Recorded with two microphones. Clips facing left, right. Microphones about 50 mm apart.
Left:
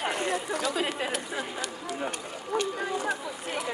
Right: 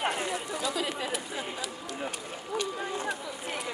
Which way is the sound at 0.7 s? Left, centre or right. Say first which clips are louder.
Left 3 dB; left.